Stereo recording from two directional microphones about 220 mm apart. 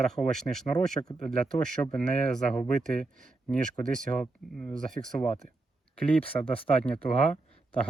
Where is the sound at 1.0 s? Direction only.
20° left (ahead or behind).